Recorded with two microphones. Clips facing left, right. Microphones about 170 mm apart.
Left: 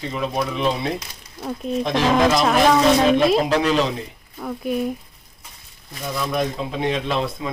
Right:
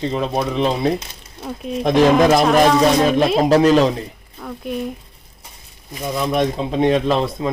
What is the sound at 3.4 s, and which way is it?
Speech, 40° right (ahead or behind).